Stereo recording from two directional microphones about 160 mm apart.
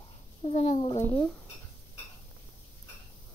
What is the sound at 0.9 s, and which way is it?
Speech, 10° left (ahead or behind).